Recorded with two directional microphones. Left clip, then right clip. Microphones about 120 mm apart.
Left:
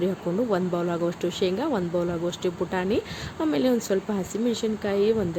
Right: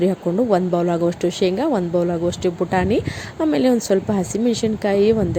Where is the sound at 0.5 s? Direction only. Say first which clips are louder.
Right 8 dB; 40° right (ahead or behind).